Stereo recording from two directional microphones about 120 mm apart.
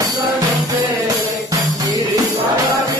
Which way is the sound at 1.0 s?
30° right (ahead or behind).